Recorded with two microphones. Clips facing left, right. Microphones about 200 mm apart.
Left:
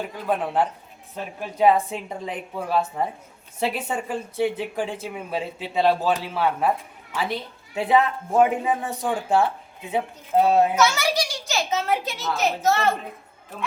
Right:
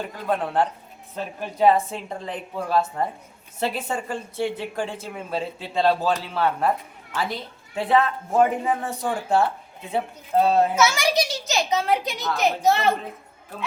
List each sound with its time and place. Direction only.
0.3 s speech: 10° left (ahead or behind)
10.8 s a child's voice: 10° right (ahead or behind)